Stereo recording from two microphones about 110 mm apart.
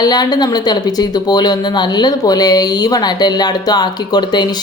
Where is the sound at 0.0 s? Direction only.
40° left (ahead or behind).